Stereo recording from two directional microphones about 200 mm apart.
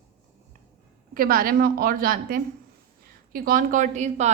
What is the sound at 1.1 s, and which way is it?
A woman's voice, 45° right (ahead or behind).